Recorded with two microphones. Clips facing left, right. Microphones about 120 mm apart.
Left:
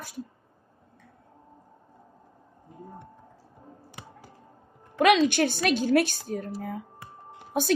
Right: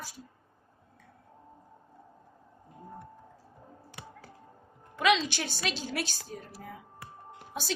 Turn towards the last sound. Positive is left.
turn(degrees=50)  # may be behind; listen again after turning